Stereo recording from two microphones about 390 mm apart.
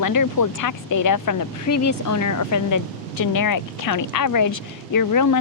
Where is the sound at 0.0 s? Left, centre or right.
Left.